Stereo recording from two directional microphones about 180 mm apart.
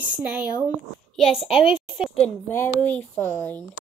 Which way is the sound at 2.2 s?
10° left (ahead or behind).